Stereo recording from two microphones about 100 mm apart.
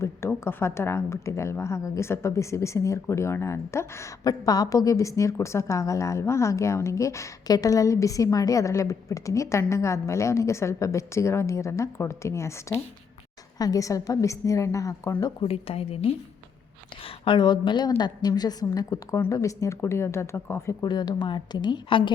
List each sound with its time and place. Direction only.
0.0 s speech: 25° left (ahead or behind)
4.2 s a woman's voice: 40° left (ahead or behind)
15.4 s a woman's voice: 75° left (ahead or behind)
17.3 s a woman's voice: 50° left (ahead or behind); by 20.7 s 25° left (ahead or behind)
20.8 s a woman's voice: 45° left (ahead or behind)